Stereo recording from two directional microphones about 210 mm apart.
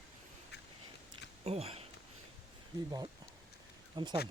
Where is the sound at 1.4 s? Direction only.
30° right (ahead or behind).